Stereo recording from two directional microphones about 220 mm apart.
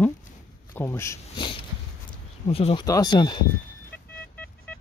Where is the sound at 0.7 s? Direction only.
10° left (ahead or behind).